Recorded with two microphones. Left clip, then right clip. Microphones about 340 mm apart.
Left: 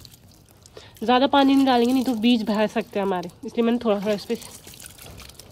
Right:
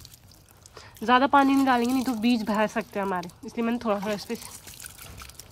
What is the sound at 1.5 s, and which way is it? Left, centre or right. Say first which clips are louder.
Speech: left 4 dB; centre.